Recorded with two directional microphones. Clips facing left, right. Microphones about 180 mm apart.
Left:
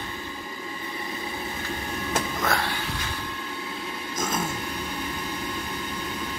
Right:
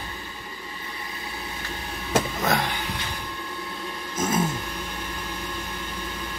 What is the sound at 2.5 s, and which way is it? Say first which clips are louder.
Speech: right 3 dB; 20° right (ahead or behind).